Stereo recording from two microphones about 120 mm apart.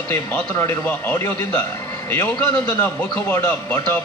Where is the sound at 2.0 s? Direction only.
35° left (ahead or behind).